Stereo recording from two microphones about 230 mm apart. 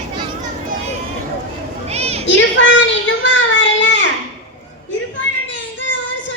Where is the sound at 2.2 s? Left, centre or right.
Left.